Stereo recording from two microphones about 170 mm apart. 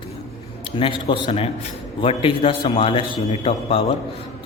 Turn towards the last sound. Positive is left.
turn(degrees=35)  # may be behind; listen again after turning